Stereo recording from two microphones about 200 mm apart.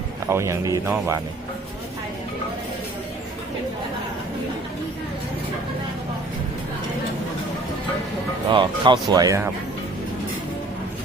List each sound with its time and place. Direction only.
0.3 s speech: 15° right (ahead or behind)
8.5 s speech: 25° right (ahead or behind)